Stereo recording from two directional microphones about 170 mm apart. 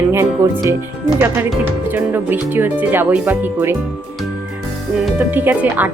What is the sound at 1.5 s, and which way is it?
A woman's voice, 10° right (ahead or behind).